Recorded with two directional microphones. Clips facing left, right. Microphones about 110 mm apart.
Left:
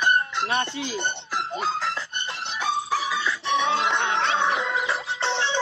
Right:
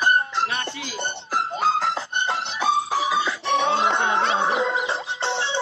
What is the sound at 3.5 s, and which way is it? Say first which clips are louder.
Music: right 2 dB; 40° right (ahead or behind).